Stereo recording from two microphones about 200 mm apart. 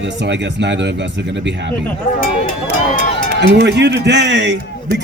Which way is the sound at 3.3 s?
55° right (ahead or behind).